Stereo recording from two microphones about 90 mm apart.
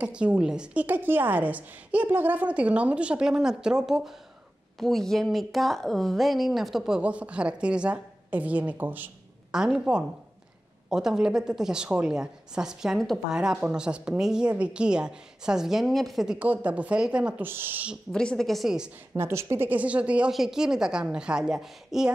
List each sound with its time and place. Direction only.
0.0 s a woman's voice: 15° right (ahead or behind)
0.8 s a woman's voice: 20° right (ahead or behind); by 7.0 s centre (ahead or behind)
7.0 s a woman's voice: 15° right (ahead or behind)
9.5 s a woman's voice: 5° right (ahead or behind)
16.3 s a woman's voice: 15° right (ahead or behind)
17.5 s speech: 25° right (ahead or behind)
18.1 s speech: 10° left (ahead or behind)
19.1 s a woman's voice: 30° right (ahead or behind); by 22.1 s 5° right (ahead or behind)